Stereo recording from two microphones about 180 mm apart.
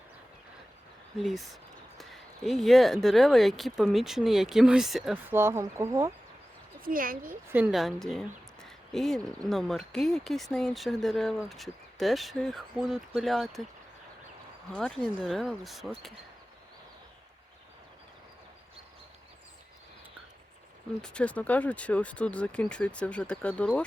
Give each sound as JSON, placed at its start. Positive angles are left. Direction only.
{"t": 1.2, "sound": "speech", "side_deg": 0}
{"t": 5.3, "sound": "speech", "side_deg": -15}
{"t": 6.8, "sound": "speech", "side_deg": -50}
{"t": 7.5, "sound": "speech", "side_deg": -5}
{"t": 8.6, "sound": "a sound", "side_deg": 0}
{"t": 9.5, "sound": "speech", "side_deg": 0}
{"t": 14.8, "sound": "speech", "side_deg": 0}
{"t": 21.0, "sound": "speech", "side_deg": 5}